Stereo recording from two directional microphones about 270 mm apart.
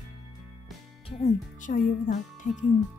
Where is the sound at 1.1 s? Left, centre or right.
Left.